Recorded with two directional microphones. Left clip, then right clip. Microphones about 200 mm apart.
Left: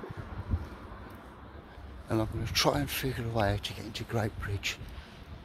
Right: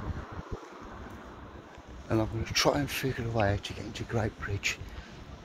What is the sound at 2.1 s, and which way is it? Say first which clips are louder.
Speech: right 2 dB; 15° left (ahead or behind).